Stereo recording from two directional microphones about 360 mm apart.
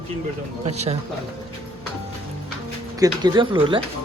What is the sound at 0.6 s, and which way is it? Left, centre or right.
Speech, centre.